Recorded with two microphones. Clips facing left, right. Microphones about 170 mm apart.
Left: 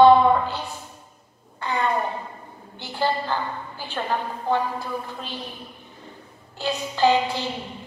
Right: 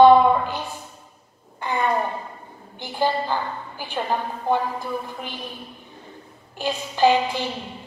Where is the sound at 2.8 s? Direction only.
15° right (ahead or behind).